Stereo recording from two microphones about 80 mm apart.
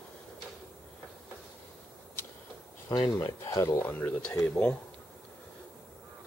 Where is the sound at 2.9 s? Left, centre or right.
Left.